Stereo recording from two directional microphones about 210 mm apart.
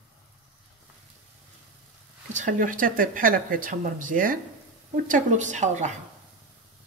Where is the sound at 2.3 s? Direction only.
40° right (ahead or behind).